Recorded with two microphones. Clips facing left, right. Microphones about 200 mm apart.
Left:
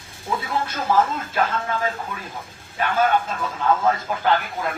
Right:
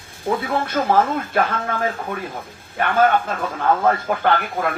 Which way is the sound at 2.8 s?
60° right (ahead or behind).